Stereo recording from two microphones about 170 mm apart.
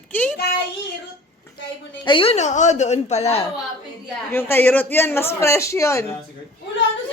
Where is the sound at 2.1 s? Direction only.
35° left (ahead or behind).